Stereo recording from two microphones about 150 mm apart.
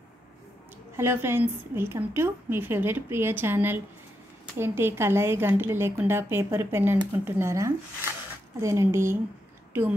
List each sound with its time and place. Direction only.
0.9 s a woman's voice: 15° right (ahead or behind)